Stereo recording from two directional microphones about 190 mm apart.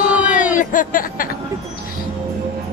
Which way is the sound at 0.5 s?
45° left (ahead or behind).